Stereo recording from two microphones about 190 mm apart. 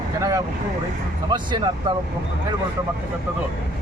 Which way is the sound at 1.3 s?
25° right (ahead or behind).